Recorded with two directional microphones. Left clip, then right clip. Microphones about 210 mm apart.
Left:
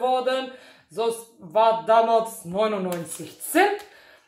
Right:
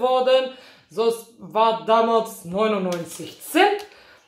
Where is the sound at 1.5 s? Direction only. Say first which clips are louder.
Even; centre (ahead or behind).